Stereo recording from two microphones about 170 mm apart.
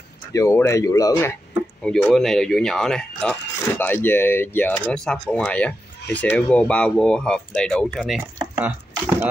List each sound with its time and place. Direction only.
0.3 s speech: 20° left (ahead or behind)
1.8 s speech: centre (ahead or behind)
8.4 s chopping: 10° right (ahead or behind)